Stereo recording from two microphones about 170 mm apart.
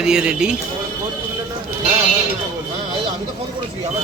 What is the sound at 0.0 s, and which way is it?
Speech, 5° right (ahead or behind).